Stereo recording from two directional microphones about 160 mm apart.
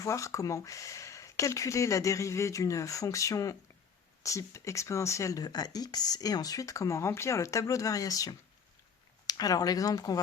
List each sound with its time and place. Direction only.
0.0 s speech: 20° left (ahead or behind)